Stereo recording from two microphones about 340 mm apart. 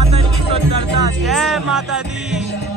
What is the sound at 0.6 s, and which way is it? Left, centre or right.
Music, right.